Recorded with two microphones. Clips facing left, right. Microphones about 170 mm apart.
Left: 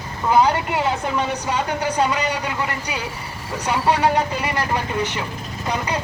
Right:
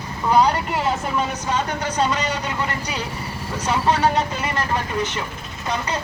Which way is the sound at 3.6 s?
10° left (ahead or behind).